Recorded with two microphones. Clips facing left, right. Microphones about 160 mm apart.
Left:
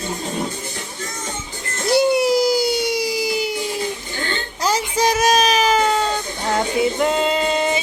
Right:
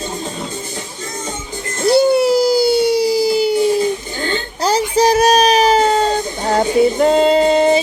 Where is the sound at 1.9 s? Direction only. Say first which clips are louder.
Right 4 dB; 30° right (ahead or behind).